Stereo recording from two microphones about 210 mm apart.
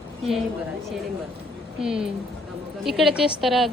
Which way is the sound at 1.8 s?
5° right (ahead or behind).